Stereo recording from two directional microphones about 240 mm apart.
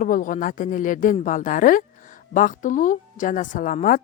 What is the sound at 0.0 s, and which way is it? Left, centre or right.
Speech, left.